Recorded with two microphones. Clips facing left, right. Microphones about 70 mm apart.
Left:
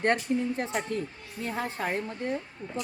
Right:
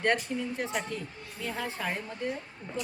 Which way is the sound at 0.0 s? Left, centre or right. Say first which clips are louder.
Left 3 dB; left.